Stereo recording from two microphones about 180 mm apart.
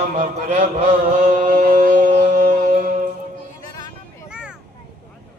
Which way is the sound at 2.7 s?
45° right (ahead or behind).